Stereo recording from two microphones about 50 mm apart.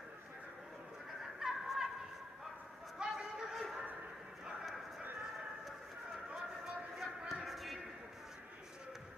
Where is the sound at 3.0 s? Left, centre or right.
Centre.